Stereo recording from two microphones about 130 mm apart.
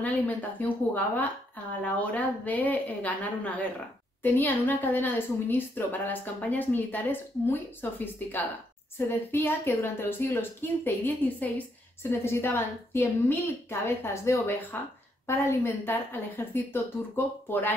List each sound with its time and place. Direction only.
0.0 s a woman's voice: 10° left (ahead or behind)